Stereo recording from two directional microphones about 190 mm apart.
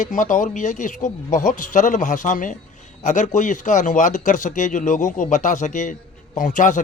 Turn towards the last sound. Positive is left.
turn(degrees=40)  # may be behind; listen again after turning